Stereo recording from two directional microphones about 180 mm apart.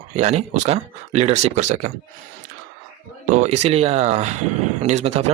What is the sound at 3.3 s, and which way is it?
Speech, 40° right (ahead or behind).